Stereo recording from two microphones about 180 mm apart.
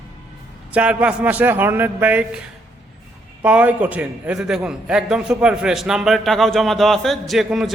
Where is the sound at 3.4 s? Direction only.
10° right (ahead or behind).